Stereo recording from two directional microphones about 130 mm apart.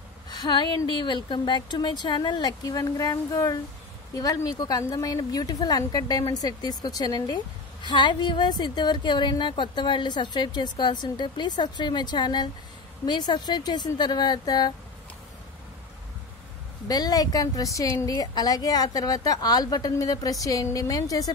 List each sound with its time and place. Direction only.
0.4 s a woman's voice: 35° left (ahead or behind)
16.8 s a woman's voice: 30° left (ahead or behind)